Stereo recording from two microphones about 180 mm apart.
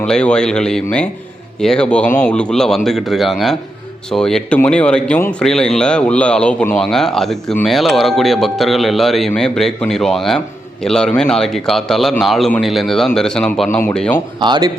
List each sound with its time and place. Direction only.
0.0 s speech: 5° left (ahead or behind)
14.4 s speech: 25° right (ahead or behind)